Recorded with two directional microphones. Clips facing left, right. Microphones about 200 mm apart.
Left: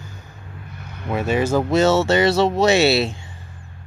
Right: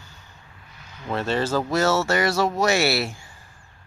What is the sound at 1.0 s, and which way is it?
Speech, 10° left (ahead or behind).